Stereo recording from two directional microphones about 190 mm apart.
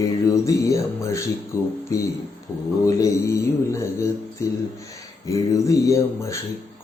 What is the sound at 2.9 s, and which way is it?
Mantra, 15° left (ahead or behind).